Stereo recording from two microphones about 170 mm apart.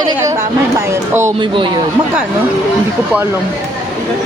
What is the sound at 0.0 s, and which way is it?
A woman's voice, 20° right (ahead or behind).